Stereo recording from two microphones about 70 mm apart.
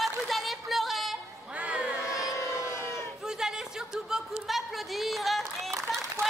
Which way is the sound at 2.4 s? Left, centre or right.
Left.